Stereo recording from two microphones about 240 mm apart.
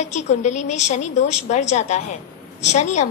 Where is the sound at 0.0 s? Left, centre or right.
Left.